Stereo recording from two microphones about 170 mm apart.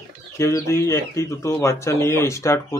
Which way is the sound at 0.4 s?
15° left (ahead or behind).